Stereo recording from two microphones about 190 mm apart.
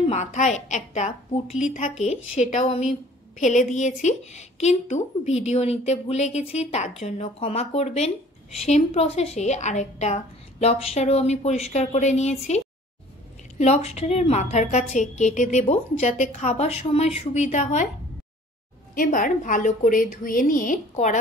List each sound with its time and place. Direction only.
0.0 s a woman's voice: 35° left (ahead or behind)
3.3 s a woman's voice: 40° left (ahead or behind)
18.9 s a woman's voice: 45° left (ahead or behind)